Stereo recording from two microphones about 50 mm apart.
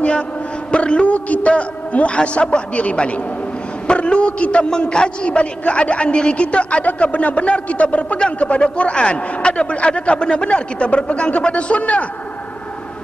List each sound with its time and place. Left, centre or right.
0.7 s a man's voice: left